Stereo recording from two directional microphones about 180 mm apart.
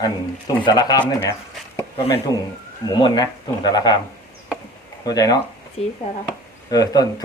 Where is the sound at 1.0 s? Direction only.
15° left (ahead or behind).